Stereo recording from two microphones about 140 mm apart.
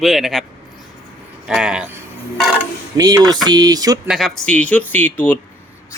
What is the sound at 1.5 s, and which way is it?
Speech, 5° right (ahead or behind).